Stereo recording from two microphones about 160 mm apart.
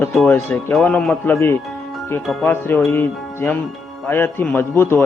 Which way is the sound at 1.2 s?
15° left (ahead or behind).